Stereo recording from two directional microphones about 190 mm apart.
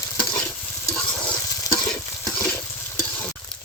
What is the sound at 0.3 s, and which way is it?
Stir, 15° left (ahead or behind).